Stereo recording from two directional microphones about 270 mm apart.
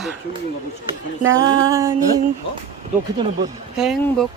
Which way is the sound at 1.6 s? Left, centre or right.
Centre.